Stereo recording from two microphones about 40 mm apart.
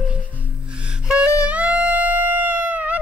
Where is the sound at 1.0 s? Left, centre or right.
Right.